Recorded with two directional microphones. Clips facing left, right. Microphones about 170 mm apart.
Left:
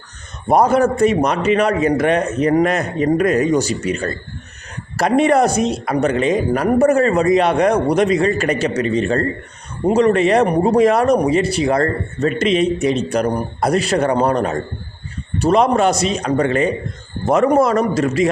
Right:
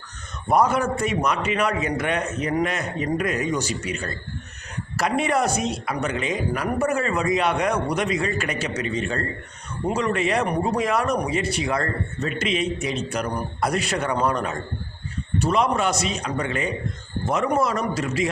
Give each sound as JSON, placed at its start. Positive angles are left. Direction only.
{"t": 0.4, "sound": "a man's voice", "side_deg": 35}